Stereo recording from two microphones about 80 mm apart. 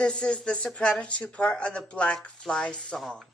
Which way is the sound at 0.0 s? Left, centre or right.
Centre.